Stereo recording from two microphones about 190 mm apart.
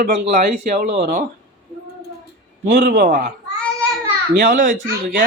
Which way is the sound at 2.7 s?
55° right (ahead or behind).